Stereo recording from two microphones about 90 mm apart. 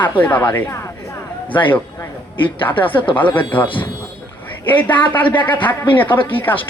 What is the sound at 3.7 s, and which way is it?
Speech, 65° left (ahead or behind).